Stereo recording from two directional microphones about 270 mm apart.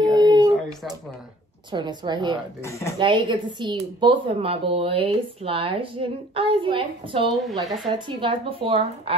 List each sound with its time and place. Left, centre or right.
0.1 s howl: centre
1.7 s a woman's voice: centre
2.6 s speech: centre
3.0 s a woman's voice: centre
7.2 s speech: centre
7.9 s a woman's voice: centre